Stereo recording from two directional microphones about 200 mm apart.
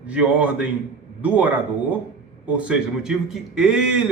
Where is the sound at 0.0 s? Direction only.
5° right (ahead or behind).